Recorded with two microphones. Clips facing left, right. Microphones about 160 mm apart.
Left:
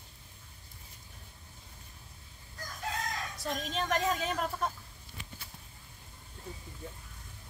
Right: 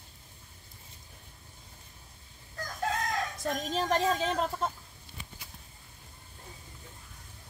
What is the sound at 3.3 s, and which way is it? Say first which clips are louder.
A woman's voice: right 3 dB; 45° right (ahead or behind).